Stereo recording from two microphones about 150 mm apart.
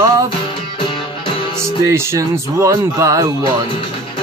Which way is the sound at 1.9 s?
20° right (ahead or behind).